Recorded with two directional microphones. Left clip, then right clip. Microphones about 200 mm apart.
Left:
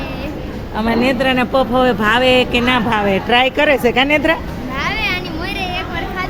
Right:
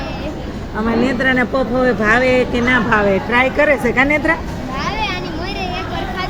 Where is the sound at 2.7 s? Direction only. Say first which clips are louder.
Right 1 dB; 25° left (ahead or behind).